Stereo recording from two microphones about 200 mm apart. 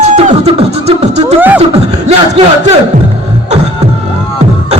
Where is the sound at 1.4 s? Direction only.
10° right (ahead or behind).